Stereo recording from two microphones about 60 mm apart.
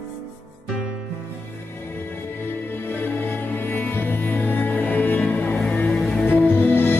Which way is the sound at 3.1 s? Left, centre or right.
Left.